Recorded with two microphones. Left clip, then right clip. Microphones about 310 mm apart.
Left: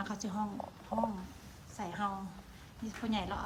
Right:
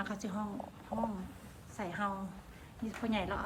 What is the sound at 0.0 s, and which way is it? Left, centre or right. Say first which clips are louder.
Speech: left 1 dB; centre.